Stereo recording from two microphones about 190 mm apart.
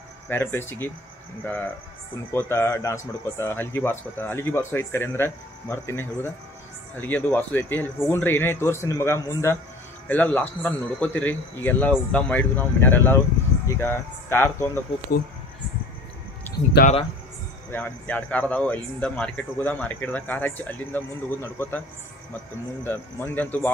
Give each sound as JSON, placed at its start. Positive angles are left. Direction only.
{"t": 0.3, "sound": "speech", "side_deg": 10}
{"t": 2.5, "sound": "speech", "side_deg": 10}
{"t": 16.8, "sound": "speech", "side_deg": 60}
{"t": 17.6, "sound": "speech", "side_deg": 10}
{"t": 22.8, "sound": "speech", "side_deg": 10}